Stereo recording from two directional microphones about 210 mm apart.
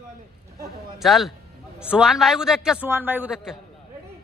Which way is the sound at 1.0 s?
Centre (ahead or behind).